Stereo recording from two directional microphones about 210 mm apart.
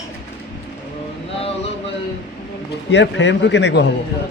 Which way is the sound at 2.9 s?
55° left (ahead or behind).